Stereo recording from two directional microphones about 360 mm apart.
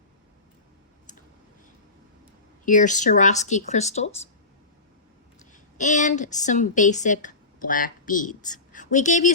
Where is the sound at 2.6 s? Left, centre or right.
Left.